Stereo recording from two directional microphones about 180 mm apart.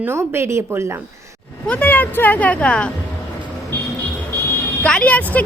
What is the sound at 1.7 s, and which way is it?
Speech, 10° left (ahead or behind).